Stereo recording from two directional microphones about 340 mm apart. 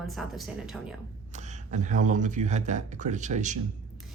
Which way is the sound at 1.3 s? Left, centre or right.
Right.